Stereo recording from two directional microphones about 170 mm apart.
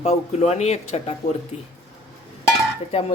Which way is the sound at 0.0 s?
40° left (ahead or behind).